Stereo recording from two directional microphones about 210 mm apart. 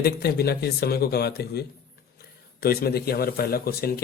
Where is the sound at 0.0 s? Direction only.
50° left (ahead or behind).